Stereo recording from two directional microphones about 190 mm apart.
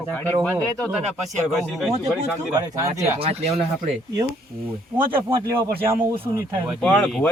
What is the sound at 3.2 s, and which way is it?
Speech, 35° right (ahead or behind).